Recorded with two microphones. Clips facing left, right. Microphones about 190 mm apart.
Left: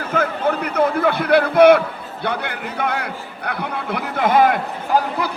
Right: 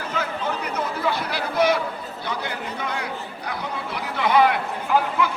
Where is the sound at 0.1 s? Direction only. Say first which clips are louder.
Left 8 dB; 55° left (ahead or behind).